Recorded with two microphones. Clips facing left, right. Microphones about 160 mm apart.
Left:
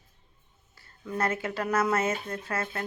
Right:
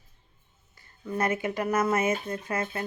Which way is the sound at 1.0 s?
10° right (ahead or behind).